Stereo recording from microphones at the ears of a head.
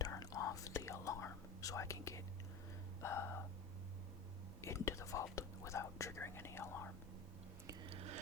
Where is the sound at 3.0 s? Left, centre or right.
Left.